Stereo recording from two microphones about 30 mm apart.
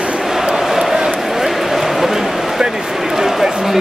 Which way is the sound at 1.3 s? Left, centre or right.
Centre.